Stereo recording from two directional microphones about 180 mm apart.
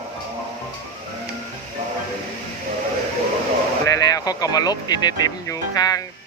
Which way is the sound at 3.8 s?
20° left (ahead or behind).